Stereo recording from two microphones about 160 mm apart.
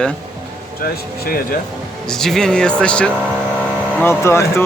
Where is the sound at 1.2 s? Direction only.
65° left (ahead or behind).